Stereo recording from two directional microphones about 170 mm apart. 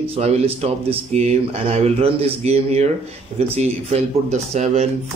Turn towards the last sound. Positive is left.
turn(degrees=-40)  # may be behind; listen again after turning